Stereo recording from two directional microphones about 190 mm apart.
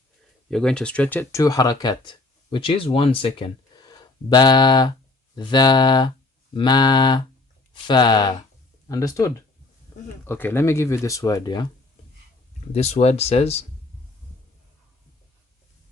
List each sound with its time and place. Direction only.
0.5 s speech: 5° left (ahead or behind); by 11.7 s 20° left (ahead or behind)
12.7 s speech: 35° left (ahead or behind)